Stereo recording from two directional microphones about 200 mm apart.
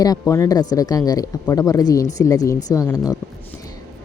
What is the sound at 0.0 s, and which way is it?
Speech, 15° left (ahead or behind).